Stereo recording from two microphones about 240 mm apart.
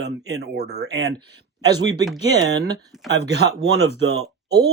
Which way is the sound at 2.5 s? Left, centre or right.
Right.